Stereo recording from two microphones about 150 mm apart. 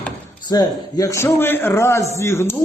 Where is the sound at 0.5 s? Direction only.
25° left (ahead or behind).